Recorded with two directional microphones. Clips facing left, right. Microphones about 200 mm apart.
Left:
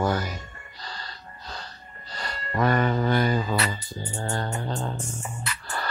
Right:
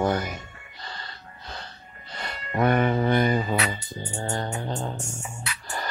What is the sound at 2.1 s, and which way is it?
Music, 20° right (ahead or behind).